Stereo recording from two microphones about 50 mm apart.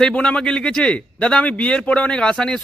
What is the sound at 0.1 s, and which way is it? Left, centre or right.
A man's voice, centre.